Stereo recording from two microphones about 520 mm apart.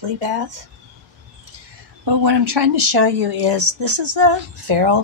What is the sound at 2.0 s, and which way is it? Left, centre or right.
Speech, right.